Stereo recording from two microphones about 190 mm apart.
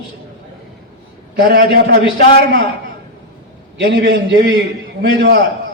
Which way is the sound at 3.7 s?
65° right (ahead or behind).